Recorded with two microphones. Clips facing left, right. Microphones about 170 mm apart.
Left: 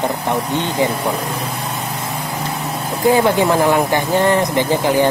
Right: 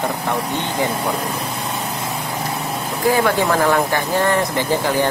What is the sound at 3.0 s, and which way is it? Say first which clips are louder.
Speech: left 3 dB; 20° left (ahead or behind).